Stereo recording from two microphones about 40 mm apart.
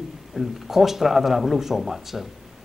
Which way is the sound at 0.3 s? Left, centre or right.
Centre.